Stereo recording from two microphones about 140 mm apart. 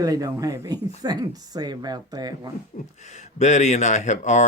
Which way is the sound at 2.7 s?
65° left (ahead or behind).